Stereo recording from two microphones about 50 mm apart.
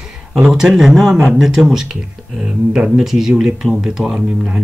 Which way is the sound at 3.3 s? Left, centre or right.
Right.